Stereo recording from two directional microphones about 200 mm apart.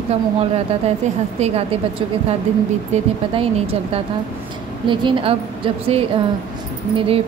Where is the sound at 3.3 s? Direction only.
30° right (ahead or behind).